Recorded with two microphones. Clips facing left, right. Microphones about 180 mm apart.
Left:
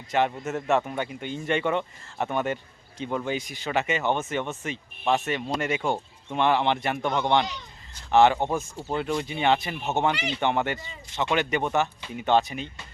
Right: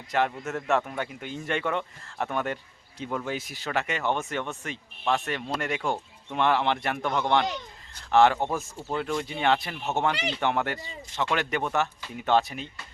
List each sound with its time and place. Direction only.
0.1 s speech: centre (ahead or behind)
7.4 s a sound: 55° right (ahead or behind)
8.1 s speech: centre (ahead or behind)